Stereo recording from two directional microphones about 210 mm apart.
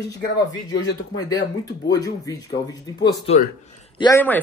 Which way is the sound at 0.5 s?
20° left (ahead or behind).